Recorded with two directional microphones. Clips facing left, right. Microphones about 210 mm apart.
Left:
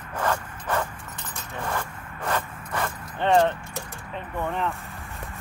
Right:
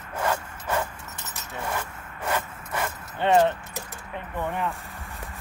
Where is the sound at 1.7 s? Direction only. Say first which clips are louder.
Left 1 dB; 10° right (ahead or behind).